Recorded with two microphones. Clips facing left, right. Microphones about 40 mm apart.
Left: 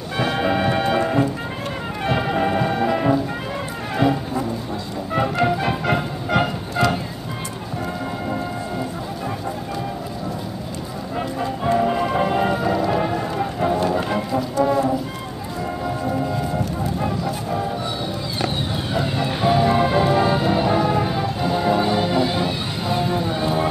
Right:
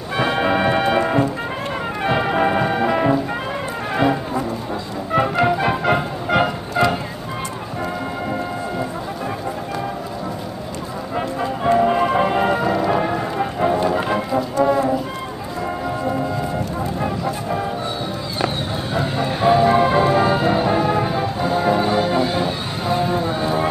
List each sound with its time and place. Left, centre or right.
0.2 s music: centre
2.0 s brass instrument: centre
5.1 s music: centre
11.4 s music: centre
17.0 s music: centre
19.1 s music: centre
22.4 s a sound: right
23.4 s run: centre